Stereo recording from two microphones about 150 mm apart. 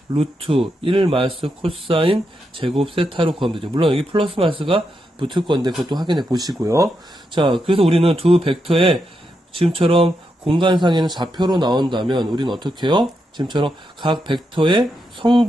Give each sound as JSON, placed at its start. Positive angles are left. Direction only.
{"t": 0.1, "sound": "a man's voice", "side_deg": -40}
{"t": 7.3, "sound": "a man's voice", "side_deg": -35}